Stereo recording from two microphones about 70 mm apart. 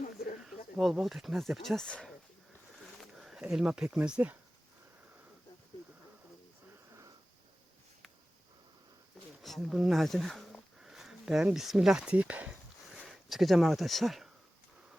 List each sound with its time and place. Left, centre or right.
0.4 s speech: centre
3.2 s a sound: centre
3.5 s speech: centre
4.2 s speech: right
9.4 s a sound: centre
9.7 s speech: centre; by 12.5 s right
13.1 s speech: centre